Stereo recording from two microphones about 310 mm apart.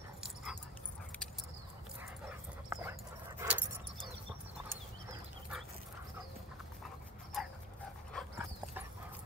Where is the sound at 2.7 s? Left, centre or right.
Centre.